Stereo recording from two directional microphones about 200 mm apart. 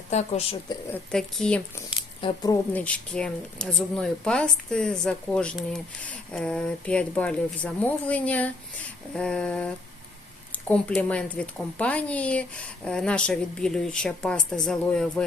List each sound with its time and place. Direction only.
0.1 s speech: 35° left (ahead or behind)
1.1 s speech: 5° left (ahead or behind)
2.2 s speech: 20° left (ahead or behind)
2.7 s speech: 5° left (ahead or behind)